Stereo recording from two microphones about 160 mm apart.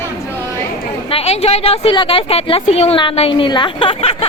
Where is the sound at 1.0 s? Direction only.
35° left (ahead or behind).